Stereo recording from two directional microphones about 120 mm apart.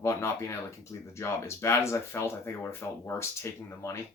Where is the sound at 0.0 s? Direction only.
25° left (ahead or behind).